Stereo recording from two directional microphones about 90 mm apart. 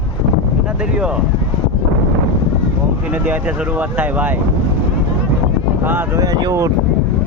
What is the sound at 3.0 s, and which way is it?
Speech, 15° right (ahead or behind).